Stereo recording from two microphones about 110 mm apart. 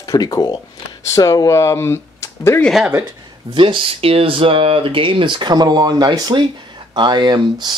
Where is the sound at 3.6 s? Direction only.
50° right (ahead or behind).